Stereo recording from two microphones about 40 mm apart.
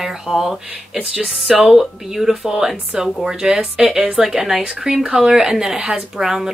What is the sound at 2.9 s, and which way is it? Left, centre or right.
Speech, right.